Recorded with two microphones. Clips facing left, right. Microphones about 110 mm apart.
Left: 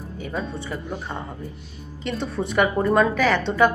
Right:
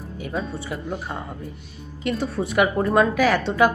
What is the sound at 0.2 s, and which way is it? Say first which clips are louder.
A woman's voice: right 1 dB; 5° right (ahead or behind).